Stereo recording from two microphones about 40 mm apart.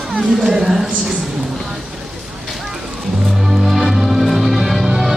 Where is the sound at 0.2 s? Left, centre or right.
Centre.